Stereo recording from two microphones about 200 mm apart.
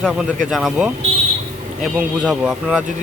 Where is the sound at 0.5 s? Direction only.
Centre (ahead or behind).